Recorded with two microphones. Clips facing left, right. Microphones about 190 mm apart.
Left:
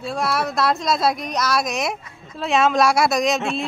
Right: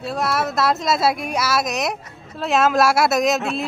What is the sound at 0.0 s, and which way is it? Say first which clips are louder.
Speech: right 1 dB; centre (ahead or behind).